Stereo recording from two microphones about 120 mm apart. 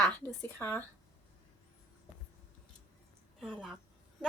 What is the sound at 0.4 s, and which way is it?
Speech, 20° left (ahead or behind).